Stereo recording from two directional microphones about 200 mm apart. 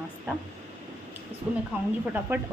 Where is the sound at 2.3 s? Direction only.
10° right (ahead or behind).